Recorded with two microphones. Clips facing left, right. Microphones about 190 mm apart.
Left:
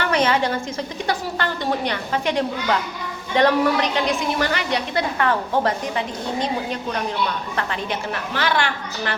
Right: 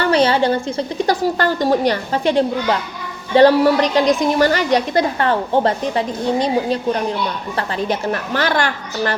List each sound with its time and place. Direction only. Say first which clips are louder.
0.0 s a woman's voice: right 5 dB; 30° right (ahead or behind)